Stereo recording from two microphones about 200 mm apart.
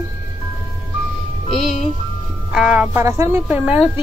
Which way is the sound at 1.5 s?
Centre (ahead or behind).